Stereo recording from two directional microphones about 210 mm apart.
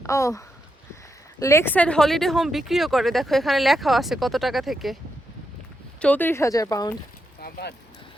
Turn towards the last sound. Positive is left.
turn(degrees=45)  # may be behind; listen again after turning